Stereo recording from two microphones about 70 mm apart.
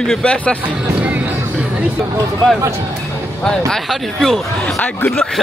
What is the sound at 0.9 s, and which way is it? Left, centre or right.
Music, right.